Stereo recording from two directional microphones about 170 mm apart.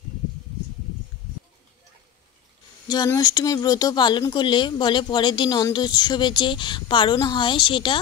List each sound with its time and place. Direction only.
2.9 s speech: 20° left (ahead or behind)